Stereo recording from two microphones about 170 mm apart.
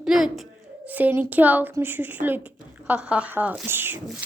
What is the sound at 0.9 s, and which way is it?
A woman's voice, 10° right (ahead or behind).